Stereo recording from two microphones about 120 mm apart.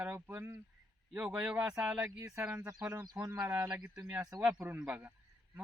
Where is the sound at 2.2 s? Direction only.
20° right (ahead or behind).